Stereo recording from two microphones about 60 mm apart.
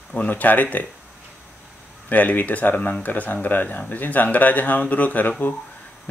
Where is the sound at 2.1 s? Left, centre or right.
Left.